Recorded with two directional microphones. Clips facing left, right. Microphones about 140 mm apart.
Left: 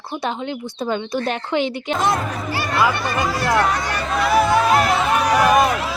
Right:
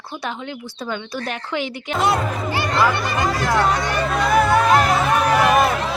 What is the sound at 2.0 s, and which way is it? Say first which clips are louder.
Speech: right 2 dB; 5° right (ahead or behind).